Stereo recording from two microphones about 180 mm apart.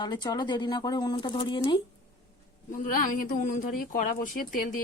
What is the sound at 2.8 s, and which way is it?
Speech, 50° left (ahead or behind).